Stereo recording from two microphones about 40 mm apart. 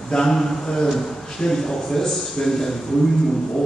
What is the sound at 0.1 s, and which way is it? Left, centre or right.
A man's voice, centre.